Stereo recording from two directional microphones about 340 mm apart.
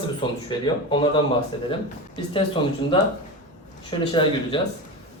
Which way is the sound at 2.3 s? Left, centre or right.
Centre.